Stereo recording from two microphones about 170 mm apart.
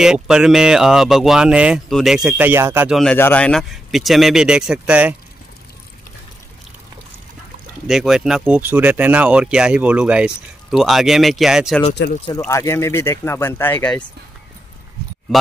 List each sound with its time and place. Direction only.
0.0 s speech: 5° right (ahead or behind)
3.0 s speech: 10° left (ahead or behind); by 5.1 s 5° right (ahead or behind)
7.8 s speech: centre (ahead or behind)
12.0 s speech: 75° left (ahead or behind)
12.4 s speech: 15° left (ahead or behind)